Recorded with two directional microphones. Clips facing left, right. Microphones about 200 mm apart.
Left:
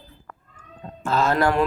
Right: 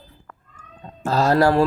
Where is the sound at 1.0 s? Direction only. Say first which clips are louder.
Right 3 dB; 35° right (ahead or behind).